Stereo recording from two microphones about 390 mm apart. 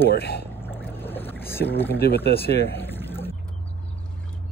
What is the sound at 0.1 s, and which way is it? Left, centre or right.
Speech, left.